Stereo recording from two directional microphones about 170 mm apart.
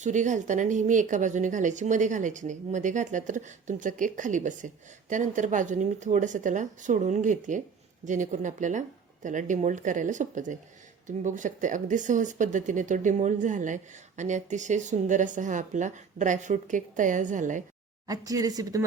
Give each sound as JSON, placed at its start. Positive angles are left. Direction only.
{"t": 0.0, "sound": "speech", "side_deg": -45}
{"t": 18.1, "sound": "speech", "side_deg": -20}